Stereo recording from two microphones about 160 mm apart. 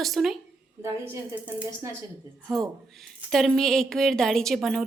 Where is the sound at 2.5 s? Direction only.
Centre (ahead or behind).